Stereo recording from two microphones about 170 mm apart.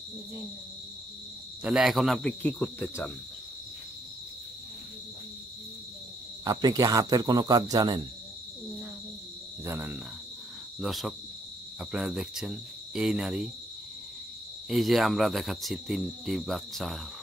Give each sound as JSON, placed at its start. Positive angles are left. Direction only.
{"t": 1.6, "sound": "cricket", "side_deg": -5}
{"t": 6.4, "sound": "speech", "side_deg": -20}
{"t": 9.7, "sound": "cricket", "side_deg": -10}
{"t": 10.8, "sound": "cricket", "side_deg": 0}
{"t": 14.7, "sound": "cricket", "side_deg": 0}